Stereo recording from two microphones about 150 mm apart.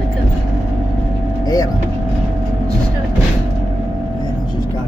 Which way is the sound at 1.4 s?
25° left (ahead or behind).